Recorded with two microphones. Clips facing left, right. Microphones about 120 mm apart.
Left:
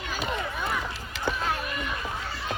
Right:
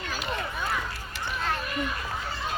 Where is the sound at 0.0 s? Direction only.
5° left (ahead or behind).